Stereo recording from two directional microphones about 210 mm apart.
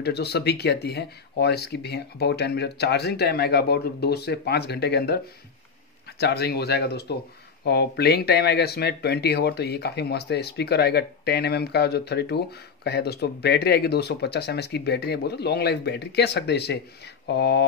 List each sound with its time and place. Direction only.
0.0 s speech: 50° left (ahead or behind)